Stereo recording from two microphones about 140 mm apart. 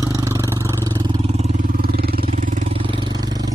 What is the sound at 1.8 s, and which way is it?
Vehicle, 90° right.